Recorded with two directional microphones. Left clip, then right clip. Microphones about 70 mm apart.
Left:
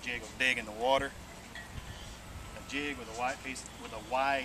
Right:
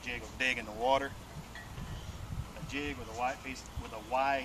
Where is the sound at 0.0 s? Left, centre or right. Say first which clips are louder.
Left 2 dB; centre.